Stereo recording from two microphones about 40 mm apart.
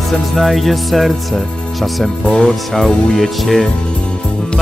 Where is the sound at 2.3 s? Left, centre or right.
Centre.